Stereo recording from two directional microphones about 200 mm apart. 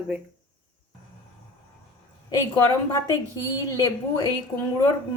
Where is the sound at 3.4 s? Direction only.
20° left (ahead or behind).